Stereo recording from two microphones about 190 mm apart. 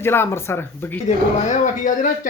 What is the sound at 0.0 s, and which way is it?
Speech, 10° left (ahead or behind).